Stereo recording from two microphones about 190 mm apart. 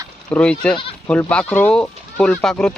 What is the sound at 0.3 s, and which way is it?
Speech, 5° left (ahead or behind).